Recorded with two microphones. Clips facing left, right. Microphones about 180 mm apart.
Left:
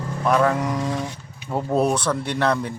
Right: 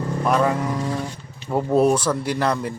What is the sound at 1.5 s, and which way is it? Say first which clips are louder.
Speech: right 3 dB; 5° right (ahead or behind).